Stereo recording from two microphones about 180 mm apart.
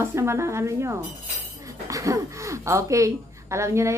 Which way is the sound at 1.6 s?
20° right (ahead or behind).